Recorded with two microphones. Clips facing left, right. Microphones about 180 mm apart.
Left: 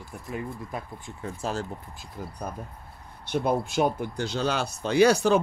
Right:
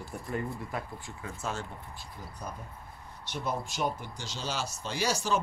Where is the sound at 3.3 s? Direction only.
55° left (ahead or behind).